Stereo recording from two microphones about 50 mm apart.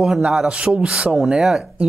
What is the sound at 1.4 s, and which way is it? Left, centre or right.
Speech, centre.